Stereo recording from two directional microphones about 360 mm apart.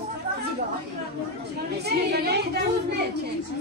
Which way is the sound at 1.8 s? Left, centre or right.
Right.